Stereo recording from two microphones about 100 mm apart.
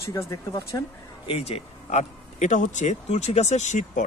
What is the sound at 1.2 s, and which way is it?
Speech, 90° left.